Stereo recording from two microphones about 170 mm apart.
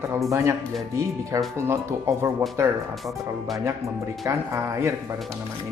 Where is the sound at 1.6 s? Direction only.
15° right (ahead or behind).